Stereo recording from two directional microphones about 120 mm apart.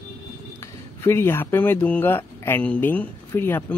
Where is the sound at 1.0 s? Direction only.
20° left (ahead or behind).